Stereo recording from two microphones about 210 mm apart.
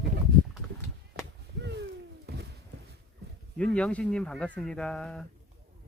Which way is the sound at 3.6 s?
5° left (ahead or behind).